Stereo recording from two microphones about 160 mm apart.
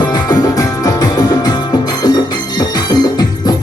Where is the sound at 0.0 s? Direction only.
25° left (ahead or behind).